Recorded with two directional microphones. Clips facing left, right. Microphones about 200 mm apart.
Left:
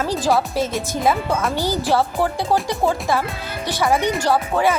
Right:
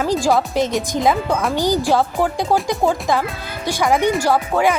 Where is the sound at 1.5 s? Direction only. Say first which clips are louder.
Right 4 dB; 15° right (ahead or behind).